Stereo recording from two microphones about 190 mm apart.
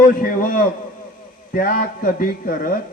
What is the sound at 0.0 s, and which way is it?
A man's voice, 45° left (ahead or behind).